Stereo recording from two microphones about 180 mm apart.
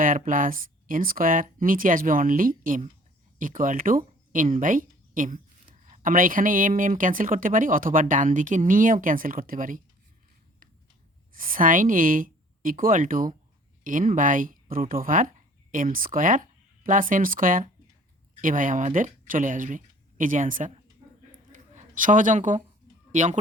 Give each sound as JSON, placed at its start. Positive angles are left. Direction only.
{"t": 0.0, "sound": "speech", "side_deg": -50}
{"t": 11.3, "sound": "speech", "side_deg": -50}
{"t": 21.5, "sound": "a sound", "side_deg": -45}
{"t": 23.1, "sound": "speech", "side_deg": -40}